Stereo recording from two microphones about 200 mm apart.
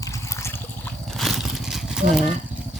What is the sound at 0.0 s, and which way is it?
Trickle, 15° left (ahead or behind).